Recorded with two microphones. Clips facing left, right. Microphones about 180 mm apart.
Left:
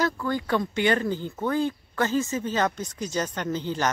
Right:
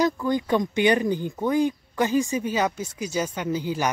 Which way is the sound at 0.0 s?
15° right (ahead or behind).